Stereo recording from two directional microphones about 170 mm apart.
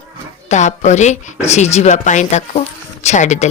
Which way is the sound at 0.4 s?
45° left (ahead or behind).